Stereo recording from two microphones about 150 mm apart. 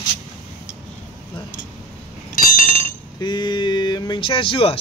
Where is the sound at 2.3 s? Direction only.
60° left (ahead or behind).